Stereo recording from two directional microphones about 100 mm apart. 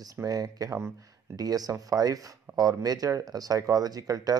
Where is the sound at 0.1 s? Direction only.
35° right (ahead or behind).